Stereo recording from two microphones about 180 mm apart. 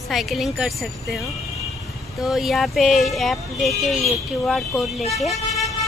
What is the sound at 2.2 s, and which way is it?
Speech, centre (ahead or behind).